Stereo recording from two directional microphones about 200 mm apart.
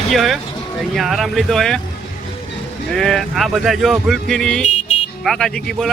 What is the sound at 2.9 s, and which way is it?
Speech, centre (ahead or behind).